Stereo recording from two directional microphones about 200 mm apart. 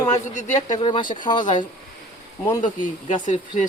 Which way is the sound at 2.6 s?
40° left (ahead or behind).